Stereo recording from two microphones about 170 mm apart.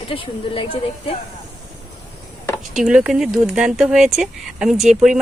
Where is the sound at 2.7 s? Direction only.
5° right (ahead or behind).